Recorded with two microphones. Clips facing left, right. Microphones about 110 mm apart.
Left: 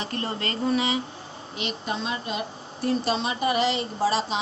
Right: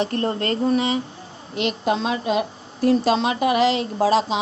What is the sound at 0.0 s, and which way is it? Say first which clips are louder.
Speech: right 7 dB; 50° right (ahead or behind).